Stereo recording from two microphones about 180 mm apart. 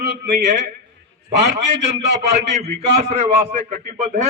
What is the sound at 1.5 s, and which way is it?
A man's voice, 35° right (ahead or behind).